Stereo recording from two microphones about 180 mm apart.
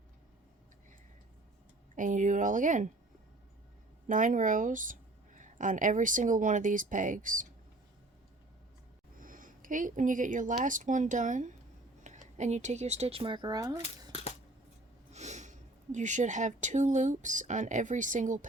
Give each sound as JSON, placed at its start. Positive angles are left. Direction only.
{"t": 2.0, "sound": "speech", "side_deg": -45}
{"t": 4.0, "sound": "speech", "side_deg": -45}
{"t": 9.2, "sound": "speech", "side_deg": -50}
{"t": 14.1, "sound": "a sound", "side_deg": 35}
{"t": 15.1, "sound": "speech", "side_deg": -40}